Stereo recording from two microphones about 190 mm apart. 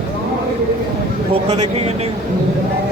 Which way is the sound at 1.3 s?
35° right (ahead or behind).